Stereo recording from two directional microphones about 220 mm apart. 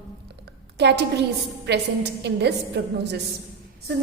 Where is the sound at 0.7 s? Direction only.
50° right (ahead or behind).